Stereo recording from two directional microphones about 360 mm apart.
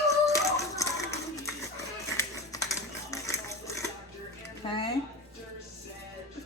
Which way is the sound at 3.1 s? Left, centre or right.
Centre.